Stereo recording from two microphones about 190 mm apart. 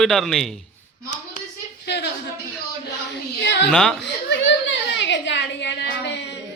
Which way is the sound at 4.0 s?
65° left (ahead or behind).